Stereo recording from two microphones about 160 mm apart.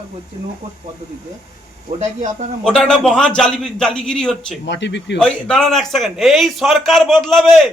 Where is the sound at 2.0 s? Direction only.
45° right (ahead or behind).